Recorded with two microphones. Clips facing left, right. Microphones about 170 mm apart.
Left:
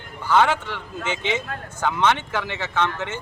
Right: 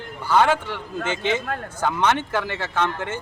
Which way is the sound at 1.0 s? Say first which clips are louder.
Right 2 dB; 50° right (ahead or behind).